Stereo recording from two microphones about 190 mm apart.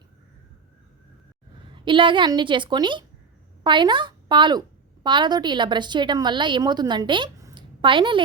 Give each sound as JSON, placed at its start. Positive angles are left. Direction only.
{"t": 1.7, "sound": "a woman's voice", "side_deg": -25}